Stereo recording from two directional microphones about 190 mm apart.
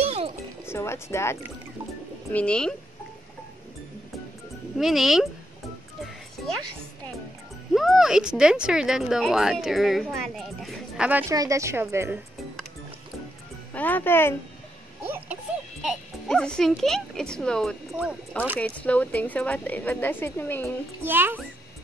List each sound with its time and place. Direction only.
0.0 s music: 35° right (ahead or behind)
0.7 s a woman's voice: 15° left (ahead or behind)
4.7 s speech: centre (ahead or behind)
7.7 s speech: centre (ahead or behind)
13.7 s a woman's voice: 10° left (ahead or behind)
15.0 s a sound: 10° right (ahead or behind)
15.8 s a woman's voice: centre (ahead or behind)
21.0 s a child's voice: 10° right (ahead or behind)